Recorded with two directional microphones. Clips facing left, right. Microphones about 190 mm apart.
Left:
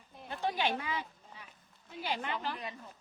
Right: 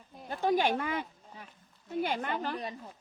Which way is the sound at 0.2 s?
45° right (ahead or behind).